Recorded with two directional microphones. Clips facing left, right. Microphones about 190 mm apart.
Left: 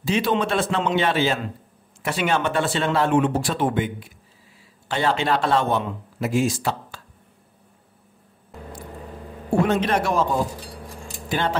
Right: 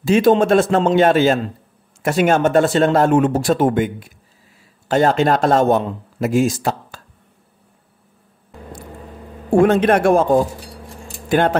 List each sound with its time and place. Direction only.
0.0 s a man's voice: 45° right (ahead or behind)
9.5 s a man's voice: 50° right (ahead or behind)